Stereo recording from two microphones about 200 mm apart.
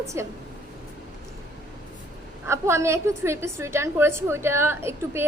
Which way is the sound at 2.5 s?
15° right (ahead or behind).